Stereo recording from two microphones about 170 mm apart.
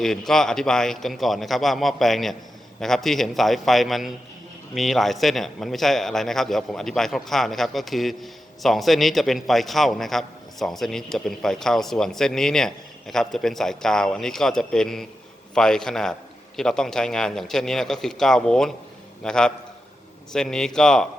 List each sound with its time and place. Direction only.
0.0 s a man's voice: centre (ahead or behind)